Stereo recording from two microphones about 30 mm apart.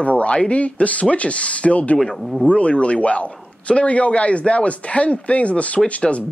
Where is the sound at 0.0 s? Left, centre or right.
Left.